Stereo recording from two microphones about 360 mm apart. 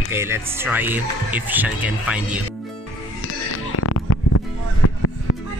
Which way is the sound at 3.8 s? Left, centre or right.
Left.